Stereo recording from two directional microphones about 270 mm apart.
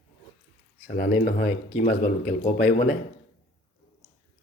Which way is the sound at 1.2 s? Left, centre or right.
Left.